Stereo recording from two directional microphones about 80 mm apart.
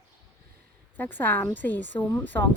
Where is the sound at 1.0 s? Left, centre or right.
Left.